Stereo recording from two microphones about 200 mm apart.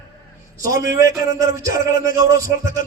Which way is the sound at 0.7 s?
15° right (ahead or behind).